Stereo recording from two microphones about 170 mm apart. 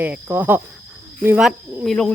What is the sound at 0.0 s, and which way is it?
A child's voice, 10° right (ahead or behind).